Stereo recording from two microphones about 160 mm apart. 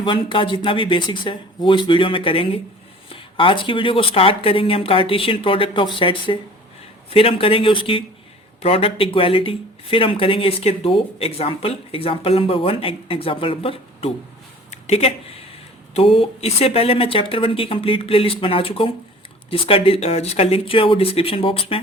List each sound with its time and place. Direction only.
0.0 s speech: 30° left (ahead or behind)
14.7 s a sound: 40° left (ahead or behind)
16.1 s speech: 40° left (ahead or behind)